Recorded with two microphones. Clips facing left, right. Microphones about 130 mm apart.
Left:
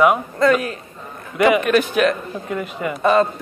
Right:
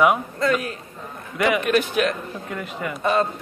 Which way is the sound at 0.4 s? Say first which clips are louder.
Left 6 dB; 80° left.